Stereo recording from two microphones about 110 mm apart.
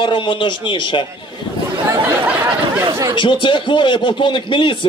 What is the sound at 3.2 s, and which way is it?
Speech, 50° left (ahead or behind).